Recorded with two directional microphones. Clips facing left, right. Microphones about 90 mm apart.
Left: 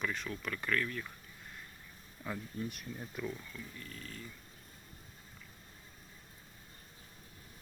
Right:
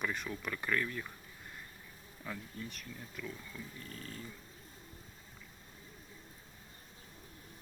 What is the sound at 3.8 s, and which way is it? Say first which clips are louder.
Cat: right 1 dB; 35° right (ahead or behind).